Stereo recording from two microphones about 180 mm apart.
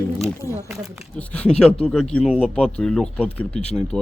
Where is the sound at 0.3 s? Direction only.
15° left (ahead or behind).